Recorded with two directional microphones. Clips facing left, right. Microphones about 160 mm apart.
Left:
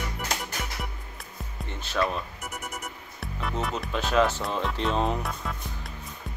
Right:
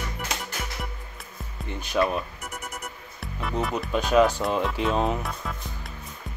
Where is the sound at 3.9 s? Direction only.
10° right (ahead or behind).